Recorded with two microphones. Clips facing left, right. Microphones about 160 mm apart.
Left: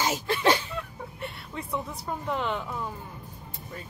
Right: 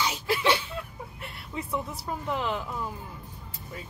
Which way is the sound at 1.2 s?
Centre (ahead or behind).